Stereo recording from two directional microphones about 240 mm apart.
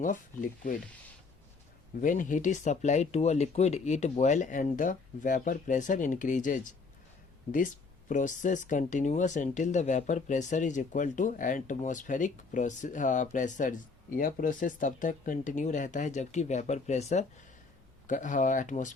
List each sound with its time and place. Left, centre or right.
0.0 s speech: left
2.0 s speech: left
8.1 s speech: left